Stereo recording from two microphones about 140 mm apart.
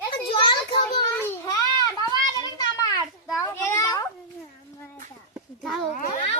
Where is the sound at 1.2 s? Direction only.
20° left (ahead or behind).